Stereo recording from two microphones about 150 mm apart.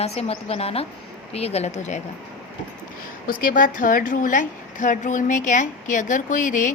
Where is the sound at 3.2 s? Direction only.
70° left (ahead or behind).